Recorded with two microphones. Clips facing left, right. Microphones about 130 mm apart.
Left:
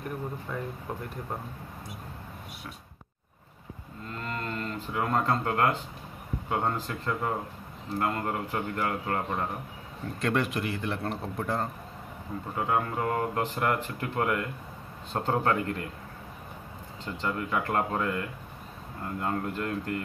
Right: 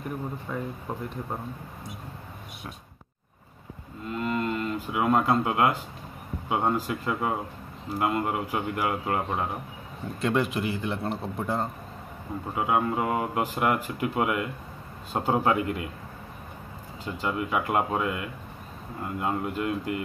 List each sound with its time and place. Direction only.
0.5 s a man's voice: 5° right (ahead or behind)
4.1 s cattle: 10° right (ahead or behind)
6.5 s speech: 10° right (ahead or behind)
10.2 s a man's voice: centre (ahead or behind)
17.0 s speech: 10° right (ahead or behind)